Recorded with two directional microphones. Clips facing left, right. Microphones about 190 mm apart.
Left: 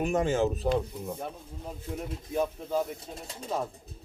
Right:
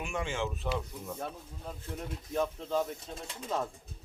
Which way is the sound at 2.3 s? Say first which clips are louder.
Left 2 dB; 10° left (ahead or behind).